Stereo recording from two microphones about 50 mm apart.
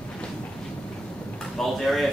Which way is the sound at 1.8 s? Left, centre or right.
Centre.